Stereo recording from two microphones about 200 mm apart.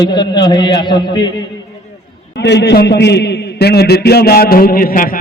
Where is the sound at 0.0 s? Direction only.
20° left (ahead or behind).